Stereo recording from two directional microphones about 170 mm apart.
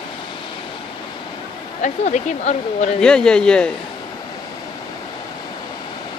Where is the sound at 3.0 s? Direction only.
5° left (ahead or behind).